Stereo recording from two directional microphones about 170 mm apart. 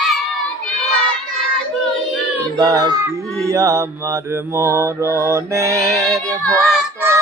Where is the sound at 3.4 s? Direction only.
20° right (ahead or behind).